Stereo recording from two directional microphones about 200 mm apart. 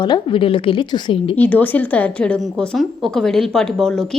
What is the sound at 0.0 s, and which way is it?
A woman's voice, 25° left (ahead or behind).